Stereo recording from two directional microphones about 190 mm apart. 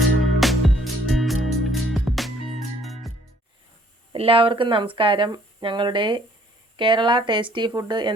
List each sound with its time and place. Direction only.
0.3 s music: centre (ahead or behind)
4.1 s speech: 30° right (ahead or behind)